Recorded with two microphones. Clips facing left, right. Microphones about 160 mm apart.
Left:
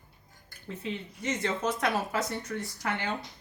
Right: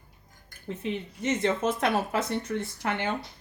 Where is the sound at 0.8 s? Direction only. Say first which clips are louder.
Right 4 dB; 20° right (ahead or behind).